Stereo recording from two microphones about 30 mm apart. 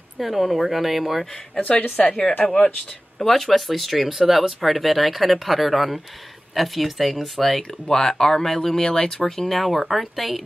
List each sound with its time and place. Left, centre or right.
0.2 s speech: centre
1.9 s speech: left
3.2 s speech: centre
7.8 s speech: left
8.8 s speech: left
9.2 s speech: centre